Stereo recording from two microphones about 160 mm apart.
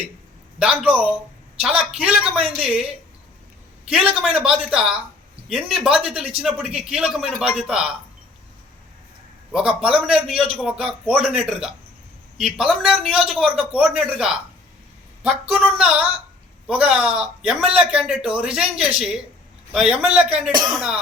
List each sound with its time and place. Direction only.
0.6 s speech: 5° right (ahead or behind)
3.8 s speech: 5° right (ahead or behind)
9.5 s speech: 5° right (ahead or behind)